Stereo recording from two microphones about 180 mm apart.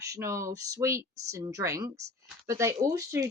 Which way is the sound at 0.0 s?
15° right (ahead or behind).